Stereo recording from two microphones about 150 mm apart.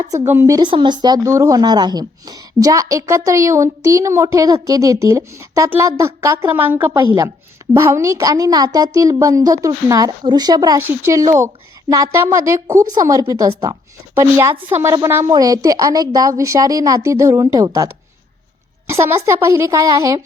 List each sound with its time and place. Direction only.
0.3 s speech: 15° right (ahead or behind)
0.6 s speech: 30° right (ahead or behind)
18.9 s speech: 20° right (ahead or behind)